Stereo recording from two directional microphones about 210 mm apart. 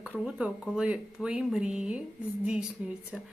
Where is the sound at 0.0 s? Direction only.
5° right (ahead or behind).